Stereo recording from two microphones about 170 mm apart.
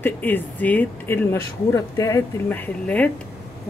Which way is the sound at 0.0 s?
10° left (ahead or behind).